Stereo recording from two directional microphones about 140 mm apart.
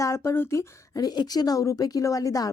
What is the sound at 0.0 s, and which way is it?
Speech, 20° left (ahead or behind).